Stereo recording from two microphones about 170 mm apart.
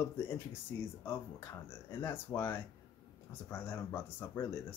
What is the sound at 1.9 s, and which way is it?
Speech, 15° left (ahead or behind).